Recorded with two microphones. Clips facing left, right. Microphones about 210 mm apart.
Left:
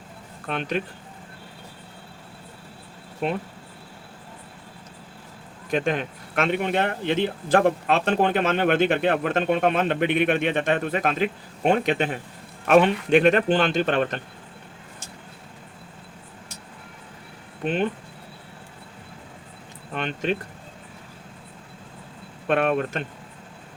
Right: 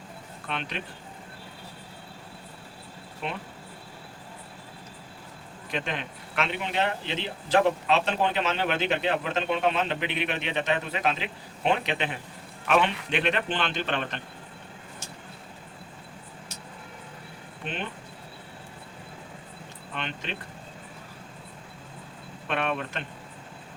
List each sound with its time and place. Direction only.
0.4 s speech: 45° left (ahead or behind)
3.2 s speech: 45° left (ahead or behind)
5.7 s speech: 45° left (ahead or behind)
17.6 s speech: 45° left (ahead or behind)
19.9 s speech: 45° left (ahead or behind)
22.4 s speech: 45° left (ahead or behind)